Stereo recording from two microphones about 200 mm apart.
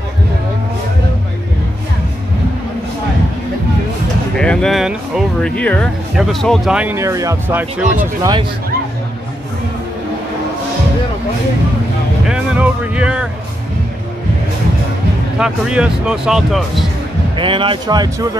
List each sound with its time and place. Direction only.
4.4 s speech: 5° left (ahead or behind)
12.3 s music: 5° right (ahead or behind)
15.3 s speech: 5° right (ahead or behind)
17.4 s speech: 25° right (ahead or behind)